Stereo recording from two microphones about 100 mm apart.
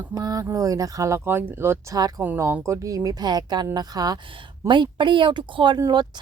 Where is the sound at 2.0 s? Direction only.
40° right (ahead or behind).